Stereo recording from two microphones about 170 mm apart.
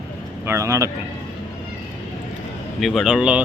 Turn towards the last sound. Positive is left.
turn(degrees=-5)  # may be behind; listen again after turning